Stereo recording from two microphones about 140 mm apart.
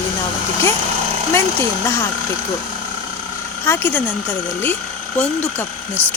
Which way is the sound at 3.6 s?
15° left (ahead or behind).